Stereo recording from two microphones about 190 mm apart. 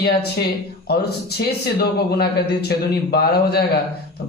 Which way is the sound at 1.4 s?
55° left (ahead or behind).